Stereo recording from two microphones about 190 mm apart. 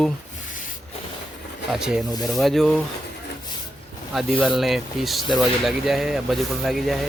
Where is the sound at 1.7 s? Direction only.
Centre (ahead or behind).